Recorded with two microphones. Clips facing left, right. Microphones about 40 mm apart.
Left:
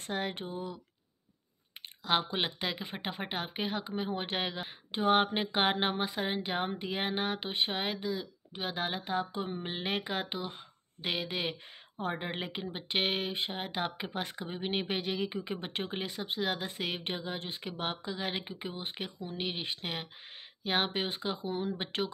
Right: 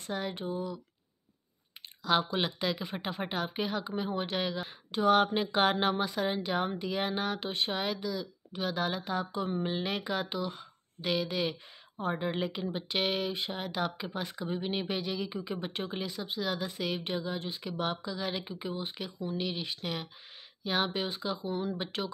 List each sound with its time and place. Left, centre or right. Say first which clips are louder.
0.0 s speech: even; left
2.0 s speech: right 2 dB; left
4.6 s speech: right 2 dB; left